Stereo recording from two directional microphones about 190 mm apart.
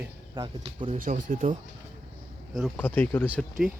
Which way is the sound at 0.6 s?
35° right (ahead or behind).